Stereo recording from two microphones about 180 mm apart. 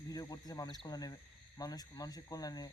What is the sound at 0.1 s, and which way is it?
Speech, 20° left (ahead or behind).